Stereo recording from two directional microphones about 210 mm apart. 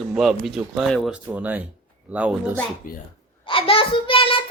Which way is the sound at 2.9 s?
40° left (ahead or behind).